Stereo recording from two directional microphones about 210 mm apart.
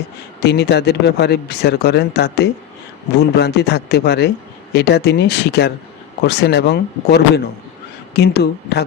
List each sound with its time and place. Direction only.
0.4 s speech: 50° left (ahead or behind)